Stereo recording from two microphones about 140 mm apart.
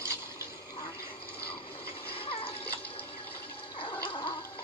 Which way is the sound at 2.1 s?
40° left (ahead or behind).